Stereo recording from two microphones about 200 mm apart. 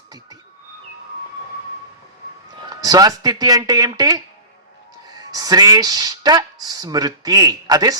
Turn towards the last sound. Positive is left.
turn(degrees=-20)  # may be behind; listen again after turning